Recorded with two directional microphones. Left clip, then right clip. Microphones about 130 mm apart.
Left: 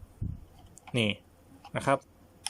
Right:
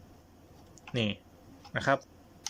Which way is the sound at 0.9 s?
20° left (ahead or behind).